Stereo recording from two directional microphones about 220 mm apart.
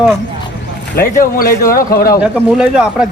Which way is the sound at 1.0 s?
45° left (ahead or behind).